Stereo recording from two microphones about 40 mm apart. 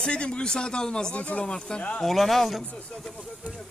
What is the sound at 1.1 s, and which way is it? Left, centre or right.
Speech, left.